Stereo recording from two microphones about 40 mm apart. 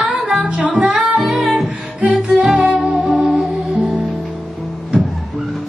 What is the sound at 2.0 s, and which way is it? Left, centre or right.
Music, right.